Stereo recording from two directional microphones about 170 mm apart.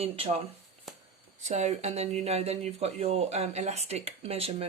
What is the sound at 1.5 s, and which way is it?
Speech, 40° right (ahead or behind).